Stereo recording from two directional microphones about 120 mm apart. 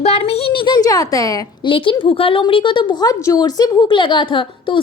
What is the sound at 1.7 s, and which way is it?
A woman's voice, 45° left (ahead or behind).